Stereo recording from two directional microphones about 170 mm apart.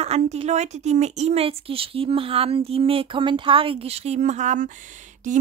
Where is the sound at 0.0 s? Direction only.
40° right (ahead or behind).